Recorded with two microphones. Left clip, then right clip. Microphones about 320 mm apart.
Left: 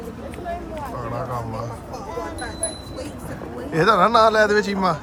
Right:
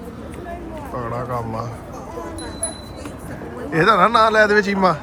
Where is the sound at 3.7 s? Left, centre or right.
Centre.